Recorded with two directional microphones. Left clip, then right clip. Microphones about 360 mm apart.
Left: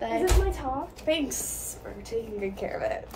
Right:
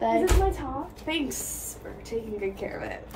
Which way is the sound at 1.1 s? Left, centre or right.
Centre.